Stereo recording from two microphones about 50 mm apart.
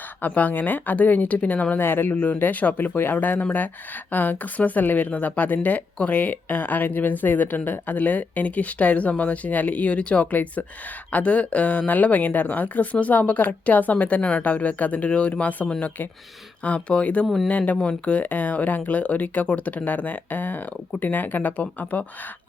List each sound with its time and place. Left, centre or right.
0.2 s speech: left
1.8 s speech: left
16.6 s speech: left
17.2 s speech: centre
17.5 s speech: left